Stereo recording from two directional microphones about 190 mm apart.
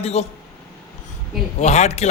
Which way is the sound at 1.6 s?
35° left (ahead or behind).